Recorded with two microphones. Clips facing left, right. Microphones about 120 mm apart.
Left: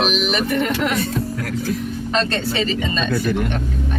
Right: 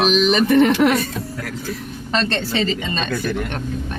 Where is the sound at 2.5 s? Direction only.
30° right (ahead or behind).